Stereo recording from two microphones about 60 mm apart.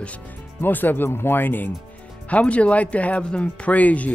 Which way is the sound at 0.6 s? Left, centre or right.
Left.